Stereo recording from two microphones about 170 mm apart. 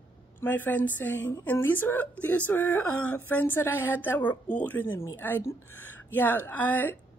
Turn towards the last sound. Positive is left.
turn(degrees=10)  # may be behind; listen again after turning